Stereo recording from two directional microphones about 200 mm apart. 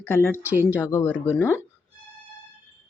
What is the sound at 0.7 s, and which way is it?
Speech, 15° left (ahead or behind).